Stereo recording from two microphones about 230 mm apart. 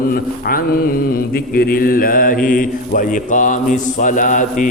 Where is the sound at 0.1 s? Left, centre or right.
Left.